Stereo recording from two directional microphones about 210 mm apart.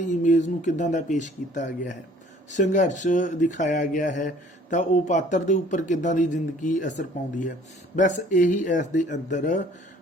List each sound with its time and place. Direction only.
0.0 s speech: 35° left (ahead or behind)